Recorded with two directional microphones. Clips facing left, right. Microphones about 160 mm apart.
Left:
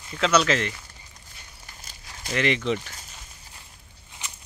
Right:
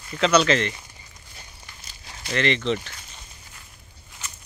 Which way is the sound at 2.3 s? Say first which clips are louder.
Right 1 dB; 10° left (ahead or behind).